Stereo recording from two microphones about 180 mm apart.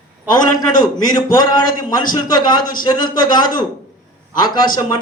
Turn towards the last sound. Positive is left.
turn(degrees=25)  # may be behind; listen again after turning